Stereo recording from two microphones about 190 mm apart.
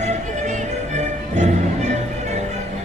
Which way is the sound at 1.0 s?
40° right (ahead or behind).